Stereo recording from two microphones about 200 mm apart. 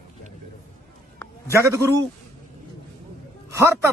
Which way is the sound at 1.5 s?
15° right (ahead or behind).